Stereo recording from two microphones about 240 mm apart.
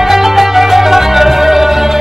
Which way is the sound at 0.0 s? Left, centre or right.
Centre.